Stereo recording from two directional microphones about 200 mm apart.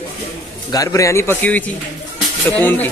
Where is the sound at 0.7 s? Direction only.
15° left (ahead or behind).